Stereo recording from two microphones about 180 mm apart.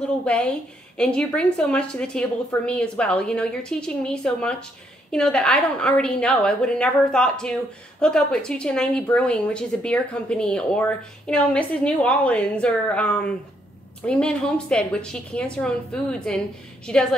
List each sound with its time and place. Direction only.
0.2 s a woman's voice: 5° left (ahead or behind)